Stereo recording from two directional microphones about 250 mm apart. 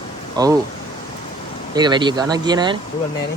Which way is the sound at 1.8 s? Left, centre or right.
Centre.